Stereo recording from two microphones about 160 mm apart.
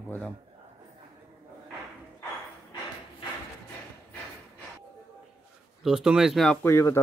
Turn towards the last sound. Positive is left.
turn(degrees=15)  # may be behind; listen again after turning